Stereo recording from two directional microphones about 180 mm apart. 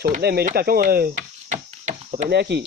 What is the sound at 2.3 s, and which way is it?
Speech, 65° right (ahead or behind).